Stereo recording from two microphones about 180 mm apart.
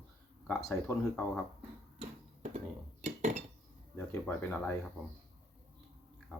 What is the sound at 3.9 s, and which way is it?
Speech, 10° left (ahead or behind).